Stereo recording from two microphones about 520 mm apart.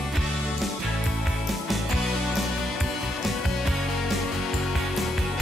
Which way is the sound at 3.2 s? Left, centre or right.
Centre.